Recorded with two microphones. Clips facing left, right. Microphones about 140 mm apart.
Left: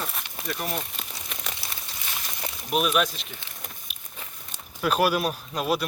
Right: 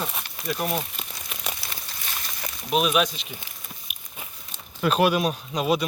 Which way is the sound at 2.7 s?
Centre (ahead or behind).